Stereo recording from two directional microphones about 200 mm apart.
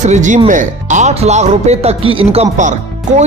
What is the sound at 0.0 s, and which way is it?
Speech, 35° right (ahead or behind).